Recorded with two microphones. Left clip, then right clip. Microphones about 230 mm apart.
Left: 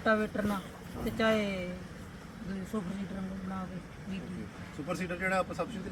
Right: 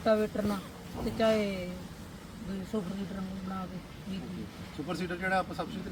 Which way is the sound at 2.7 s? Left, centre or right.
Centre.